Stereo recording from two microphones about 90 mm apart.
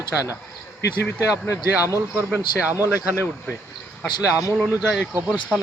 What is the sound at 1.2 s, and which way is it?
Speech, 35° left (ahead or behind).